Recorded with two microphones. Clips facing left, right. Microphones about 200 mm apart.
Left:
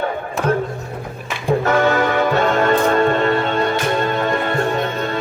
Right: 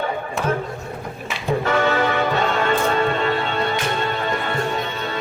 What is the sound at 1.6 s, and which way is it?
Music, 45° left (ahead or behind).